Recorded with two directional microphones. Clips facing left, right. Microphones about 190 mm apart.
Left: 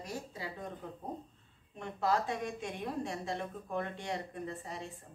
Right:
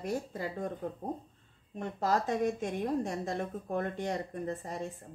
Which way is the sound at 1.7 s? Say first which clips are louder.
Right 2 dB; 40° right (ahead or behind).